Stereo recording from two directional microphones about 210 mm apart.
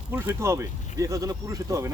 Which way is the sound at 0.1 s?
10° right (ahead or behind).